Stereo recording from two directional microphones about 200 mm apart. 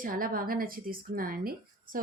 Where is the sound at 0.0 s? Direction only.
45° right (ahead or behind).